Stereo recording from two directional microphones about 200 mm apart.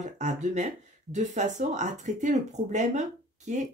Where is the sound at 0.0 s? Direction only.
35° right (ahead or behind).